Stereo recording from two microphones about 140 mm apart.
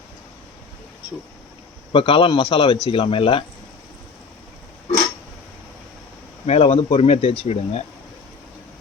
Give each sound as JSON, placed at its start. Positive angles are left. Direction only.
{"t": 1.9, "sound": "a man's voice", "side_deg": 40}
{"t": 6.4, "sound": "speech", "side_deg": 45}